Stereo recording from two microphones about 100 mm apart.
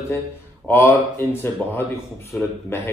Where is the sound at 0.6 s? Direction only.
25° left (ahead or behind).